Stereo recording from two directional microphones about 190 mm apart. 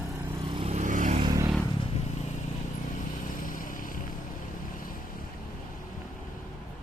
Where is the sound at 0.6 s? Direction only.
35° right (ahead or behind).